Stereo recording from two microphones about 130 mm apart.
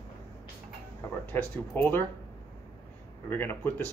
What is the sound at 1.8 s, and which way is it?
Speech, 15° left (ahead or behind).